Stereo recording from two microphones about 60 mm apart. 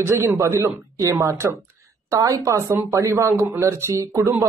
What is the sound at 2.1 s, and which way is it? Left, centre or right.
A man's voice, right.